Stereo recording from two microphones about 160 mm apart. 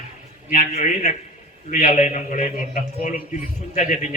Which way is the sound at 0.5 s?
50° left (ahead or behind).